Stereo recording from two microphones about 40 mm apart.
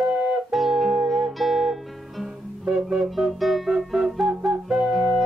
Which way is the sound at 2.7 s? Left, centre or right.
Centre.